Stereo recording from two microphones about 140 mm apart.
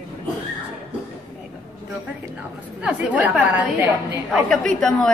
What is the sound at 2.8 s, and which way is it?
A woman's voice, 10° right (ahead or behind).